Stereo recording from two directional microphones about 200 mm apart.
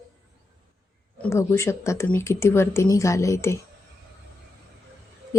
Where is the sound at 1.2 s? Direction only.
15° left (ahead or behind).